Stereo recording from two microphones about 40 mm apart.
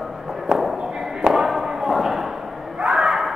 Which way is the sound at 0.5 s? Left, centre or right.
Centre.